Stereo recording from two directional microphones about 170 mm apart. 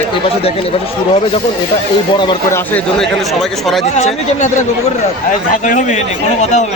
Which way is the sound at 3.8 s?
40° left (ahead or behind).